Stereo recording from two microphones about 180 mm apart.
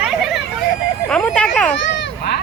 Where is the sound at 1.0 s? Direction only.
5° left (ahead or behind).